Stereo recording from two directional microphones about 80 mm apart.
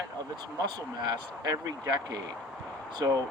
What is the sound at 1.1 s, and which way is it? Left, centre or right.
Speech, right.